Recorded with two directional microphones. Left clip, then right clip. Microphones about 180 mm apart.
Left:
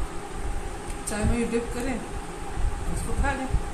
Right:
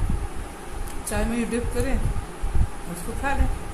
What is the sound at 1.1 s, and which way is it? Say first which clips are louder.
Speech: right 3 dB; 35° right (ahead or behind).